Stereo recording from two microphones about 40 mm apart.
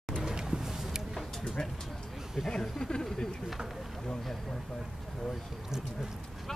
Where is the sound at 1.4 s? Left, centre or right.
Left.